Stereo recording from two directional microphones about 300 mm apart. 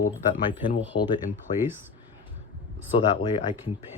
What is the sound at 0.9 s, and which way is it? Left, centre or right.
Speech, left.